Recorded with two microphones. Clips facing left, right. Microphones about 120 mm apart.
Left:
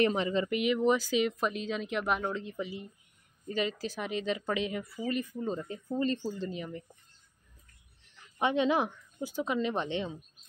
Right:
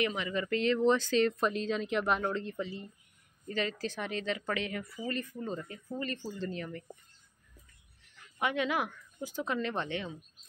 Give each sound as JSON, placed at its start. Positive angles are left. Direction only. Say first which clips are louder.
{"t": 0.0, "sound": "speech", "louder": "left 5 dB", "side_deg": 35}
{"t": 0.5, "sound": "speech", "louder": "right 3 dB", "side_deg": 10}
{"t": 8.4, "sound": "a woman's voice", "louder": "left 4 dB", "side_deg": 25}